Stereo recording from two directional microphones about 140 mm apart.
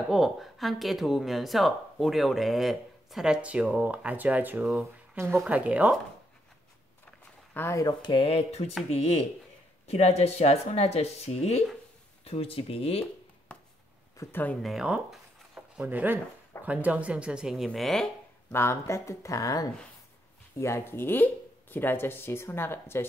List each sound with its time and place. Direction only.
0.1 s speech: centre (ahead or behind)
5.1 s speech: 20° right (ahead or behind)
7.5 s speech: 20° left (ahead or behind)
8.0 s speech: 40° left (ahead or behind)
14.1 s speech: 15° left (ahead or behind)
14.6 s speech: centre (ahead or behind)
18.5 s speech: 20° left (ahead or behind)